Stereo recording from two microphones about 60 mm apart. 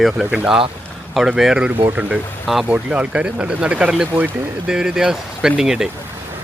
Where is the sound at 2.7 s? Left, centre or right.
Right.